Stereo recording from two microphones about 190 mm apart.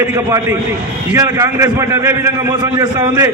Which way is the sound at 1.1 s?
15° right (ahead or behind).